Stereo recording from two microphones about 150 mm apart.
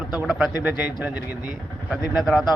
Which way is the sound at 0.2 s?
Centre (ahead or behind).